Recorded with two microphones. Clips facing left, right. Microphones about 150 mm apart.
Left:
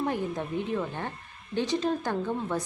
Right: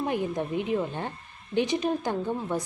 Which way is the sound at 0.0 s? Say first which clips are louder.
Right 2 dB; 15° right (ahead or behind).